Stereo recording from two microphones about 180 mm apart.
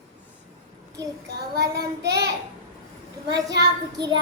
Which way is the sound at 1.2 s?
65° right (ahead or behind).